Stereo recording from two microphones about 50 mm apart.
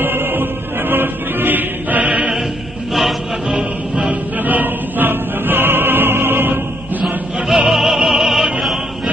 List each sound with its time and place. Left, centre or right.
0.0 s music: right
2.9 s music: centre
3.5 s music: centre
4.1 s choir: right
7.3 s opera: centre